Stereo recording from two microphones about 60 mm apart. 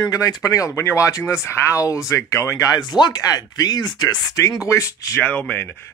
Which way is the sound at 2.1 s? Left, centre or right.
Left.